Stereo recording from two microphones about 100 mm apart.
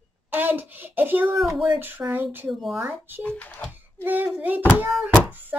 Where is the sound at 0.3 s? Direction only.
20° right (ahead or behind).